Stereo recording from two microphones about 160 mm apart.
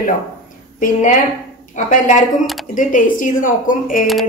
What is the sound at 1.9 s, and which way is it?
A woman's voice, 50° left (ahead or behind).